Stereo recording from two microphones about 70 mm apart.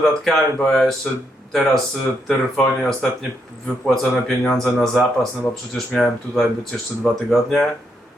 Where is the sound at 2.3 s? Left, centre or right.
Centre.